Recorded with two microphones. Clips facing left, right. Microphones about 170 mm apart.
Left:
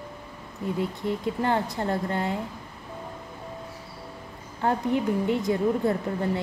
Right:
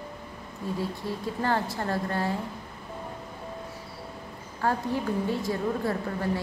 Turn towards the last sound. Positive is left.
turn(degrees=20)  # may be behind; listen again after turning